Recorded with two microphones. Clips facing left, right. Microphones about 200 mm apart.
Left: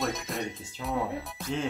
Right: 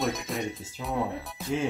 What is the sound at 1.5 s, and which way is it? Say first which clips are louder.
Speech: right 3 dB; 5° right (ahead or behind).